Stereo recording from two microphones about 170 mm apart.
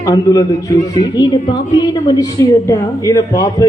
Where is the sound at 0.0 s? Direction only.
20° left (ahead or behind).